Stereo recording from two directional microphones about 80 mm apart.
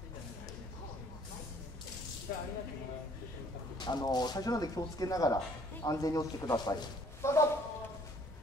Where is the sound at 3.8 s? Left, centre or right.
Left.